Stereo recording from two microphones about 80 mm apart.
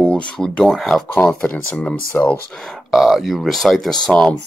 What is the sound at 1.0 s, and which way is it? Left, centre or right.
Speech, centre.